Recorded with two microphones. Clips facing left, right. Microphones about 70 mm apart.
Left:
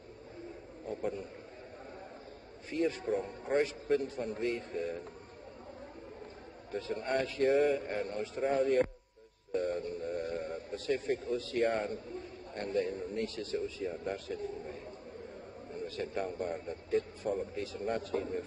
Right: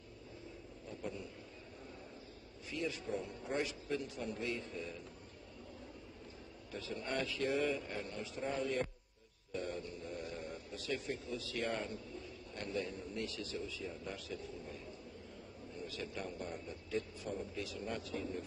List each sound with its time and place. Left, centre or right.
0.8 s a sound: left
2.7 s a man's voice: left
6.7 s a man's voice: left